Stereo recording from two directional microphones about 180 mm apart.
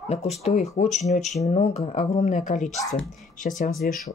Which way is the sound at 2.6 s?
Centre (ahead or behind).